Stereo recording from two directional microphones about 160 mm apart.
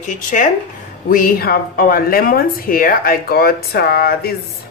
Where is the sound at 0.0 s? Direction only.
55° left (ahead or behind).